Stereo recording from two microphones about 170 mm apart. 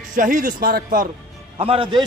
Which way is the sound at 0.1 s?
55° right (ahead or behind).